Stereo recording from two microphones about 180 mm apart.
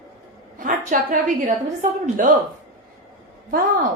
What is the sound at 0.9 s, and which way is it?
A woman's voice, 45° right (ahead or behind).